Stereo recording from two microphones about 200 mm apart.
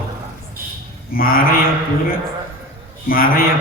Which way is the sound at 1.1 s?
45° left (ahead or behind).